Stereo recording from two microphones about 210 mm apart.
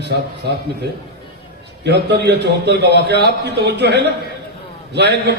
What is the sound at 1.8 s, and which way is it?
A man's voice, 55° right (ahead or behind).